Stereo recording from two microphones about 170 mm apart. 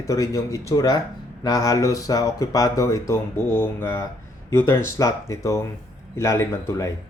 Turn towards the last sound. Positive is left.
turn(degrees=15)  # may be behind; listen again after turning